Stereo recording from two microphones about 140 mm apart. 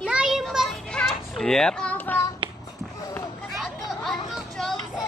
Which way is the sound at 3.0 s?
25° left (ahead or behind).